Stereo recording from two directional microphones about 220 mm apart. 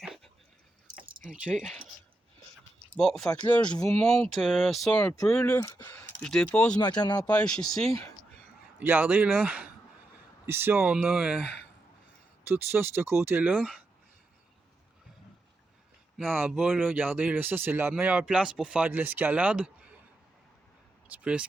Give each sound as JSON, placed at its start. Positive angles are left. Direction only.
{"t": 0.0, "sound": "a sound", "side_deg": 0}
{"t": 1.2, "sound": "speech", "side_deg": 0}
{"t": 2.9, "sound": "speech", "side_deg": 0}
{"t": 7.0, "sound": "speech", "side_deg": 20}
{"t": 7.3, "sound": "speech", "side_deg": 5}
{"t": 8.8, "sound": "speech", "side_deg": -10}
{"t": 12.5, "sound": "speech", "side_deg": -10}
{"t": 16.3, "sound": "speech", "side_deg": -5}
{"t": 21.1, "sound": "speech", "side_deg": -5}